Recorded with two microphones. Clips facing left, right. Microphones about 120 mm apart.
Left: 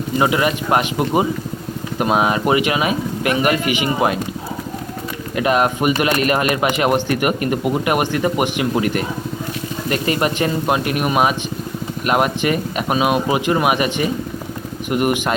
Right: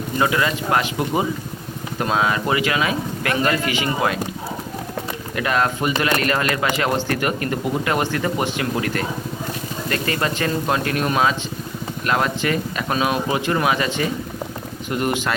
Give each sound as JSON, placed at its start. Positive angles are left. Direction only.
{"t": 0.2, "sound": "speech", "side_deg": 20}
{"t": 5.3, "sound": "speech", "side_deg": 20}